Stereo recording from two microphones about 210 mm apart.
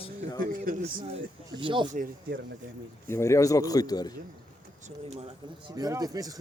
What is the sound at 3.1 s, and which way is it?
Speech, 15° left (ahead or behind).